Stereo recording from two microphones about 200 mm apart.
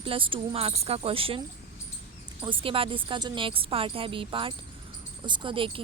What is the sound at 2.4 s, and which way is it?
Speech, 25° right (ahead or behind).